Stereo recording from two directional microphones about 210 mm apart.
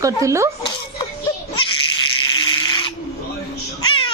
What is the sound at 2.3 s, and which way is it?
Toothbrush, 20° left (ahead or behind).